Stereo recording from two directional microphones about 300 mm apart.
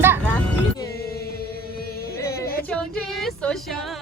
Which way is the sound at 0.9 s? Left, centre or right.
Left.